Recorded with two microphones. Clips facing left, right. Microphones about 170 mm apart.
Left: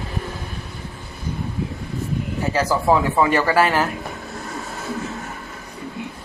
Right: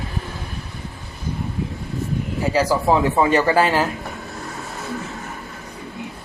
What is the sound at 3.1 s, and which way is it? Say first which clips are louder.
Speech: right 1 dB; 20° right (ahead or behind).